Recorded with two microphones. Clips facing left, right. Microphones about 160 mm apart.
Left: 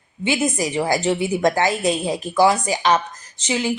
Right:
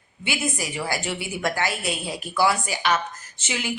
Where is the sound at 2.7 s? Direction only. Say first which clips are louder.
Left 5 dB; 40° left (ahead or behind).